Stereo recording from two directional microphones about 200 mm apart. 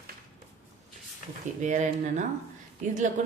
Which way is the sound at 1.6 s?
35° right (ahead or behind).